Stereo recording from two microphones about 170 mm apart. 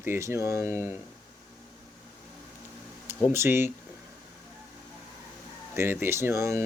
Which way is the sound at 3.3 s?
15° right (ahead or behind).